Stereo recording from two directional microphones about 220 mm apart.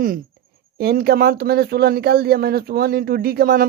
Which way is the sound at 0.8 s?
45° right (ahead or behind).